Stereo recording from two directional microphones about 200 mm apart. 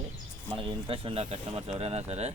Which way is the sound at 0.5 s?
25° right (ahead or behind).